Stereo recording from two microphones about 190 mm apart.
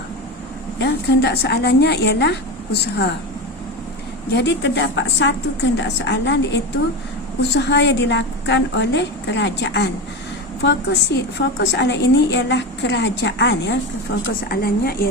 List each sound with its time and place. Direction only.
0.8 s a woman's voice: 60° left (ahead or behind)
4.3 s a woman's voice: 65° left (ahead or behind)
14.3 s a woman's voice: 55° left (ahead or behind)